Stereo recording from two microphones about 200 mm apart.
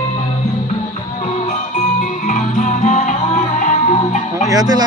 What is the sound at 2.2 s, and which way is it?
Music, 40° left (ahead or behind).